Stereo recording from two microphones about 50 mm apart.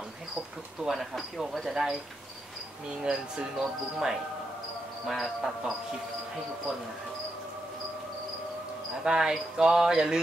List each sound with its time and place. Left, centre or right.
0.8 s speech: centre
3.0 s speech: centre
3.5 s speech: centre
9.0 s speech: centre